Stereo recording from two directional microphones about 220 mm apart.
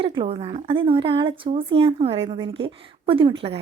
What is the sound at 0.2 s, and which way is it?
Speech, 25° right (ahead or behind).